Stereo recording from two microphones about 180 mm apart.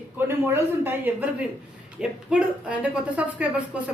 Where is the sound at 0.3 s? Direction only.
15° right (ahead or behind).